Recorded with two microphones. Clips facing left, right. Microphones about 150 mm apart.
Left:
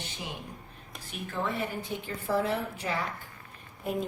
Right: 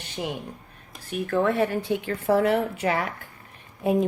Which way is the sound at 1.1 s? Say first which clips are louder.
Right 10 dB; 60° right (ahead or behind).